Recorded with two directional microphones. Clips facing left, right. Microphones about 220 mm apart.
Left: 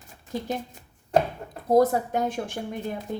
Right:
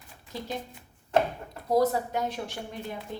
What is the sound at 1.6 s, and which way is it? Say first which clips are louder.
A woman's voice: left 4 dB; 50° left (ahead or behind).